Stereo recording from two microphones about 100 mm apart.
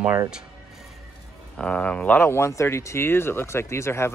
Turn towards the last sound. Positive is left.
turn(degrees=25)  # may be behind; listen again after turning